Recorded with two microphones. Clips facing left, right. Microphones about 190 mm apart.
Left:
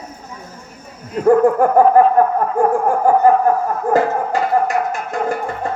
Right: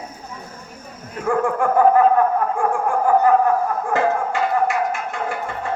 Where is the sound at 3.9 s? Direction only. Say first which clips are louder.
Left 4 dB; 40° left (ahead or behind).